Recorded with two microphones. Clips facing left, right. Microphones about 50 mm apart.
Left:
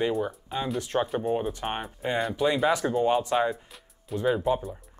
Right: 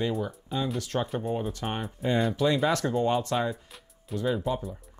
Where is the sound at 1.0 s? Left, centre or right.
Centre.